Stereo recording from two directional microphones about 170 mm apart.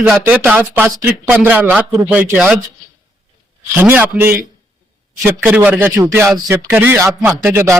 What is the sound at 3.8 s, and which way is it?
A man's voice, 10° right (ahead or behind).